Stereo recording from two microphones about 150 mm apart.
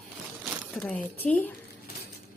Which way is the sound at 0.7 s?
5° left (ahead or behind).